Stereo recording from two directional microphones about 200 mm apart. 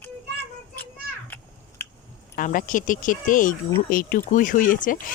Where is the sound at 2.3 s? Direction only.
40° left (ahead or behind).